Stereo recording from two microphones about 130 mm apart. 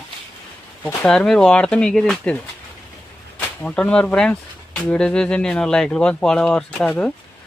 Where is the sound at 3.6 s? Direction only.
5° left (ahead or behind).